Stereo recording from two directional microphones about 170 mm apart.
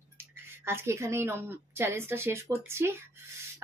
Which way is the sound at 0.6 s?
15° right (ahead or behind).